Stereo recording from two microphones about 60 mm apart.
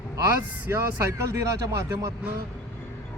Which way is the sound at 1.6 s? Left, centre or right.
Right.